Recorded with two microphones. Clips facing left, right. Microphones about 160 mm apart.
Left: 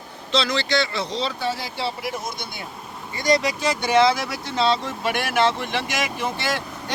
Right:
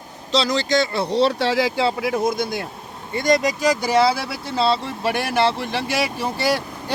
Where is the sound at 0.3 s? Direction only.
40° right (ahead or behind); by 1.7 s 90° right.